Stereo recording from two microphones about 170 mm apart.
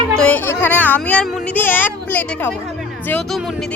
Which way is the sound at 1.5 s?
10° left (ahead or behind).